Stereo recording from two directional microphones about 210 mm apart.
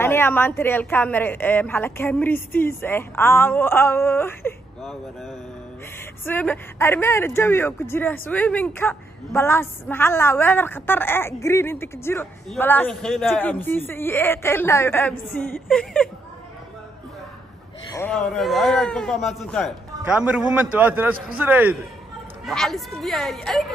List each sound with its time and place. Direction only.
0.0 s speech: 10° left (ahead or behind)
6.2 s a man's voice: 10° left (ahead or behind)
17.9 s a man's voice: 5° left (ahead or behind)